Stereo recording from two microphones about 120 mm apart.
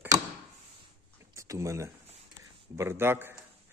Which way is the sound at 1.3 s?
25° right (ahead or behind).